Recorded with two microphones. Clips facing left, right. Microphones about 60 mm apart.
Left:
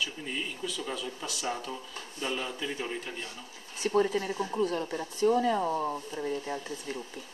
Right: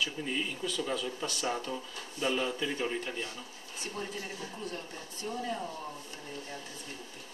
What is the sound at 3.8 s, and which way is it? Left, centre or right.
Speech, left.